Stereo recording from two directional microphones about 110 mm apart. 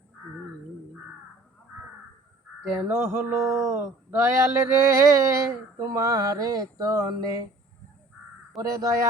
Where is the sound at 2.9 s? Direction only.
20° right (ahead or behind).